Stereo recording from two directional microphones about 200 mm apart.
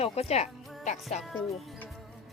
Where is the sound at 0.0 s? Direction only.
30° left (ahead or behind).